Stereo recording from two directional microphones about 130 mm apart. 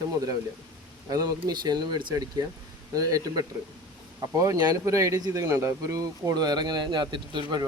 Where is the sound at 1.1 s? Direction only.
30° right (ahead or behind).